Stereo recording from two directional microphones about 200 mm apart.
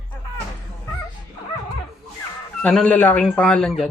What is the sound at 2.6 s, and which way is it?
Speech, 5° left (ahead or behind).